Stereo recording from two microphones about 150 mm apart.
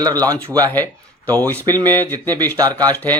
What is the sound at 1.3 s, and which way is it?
Speech, 10° left (ahead or behind).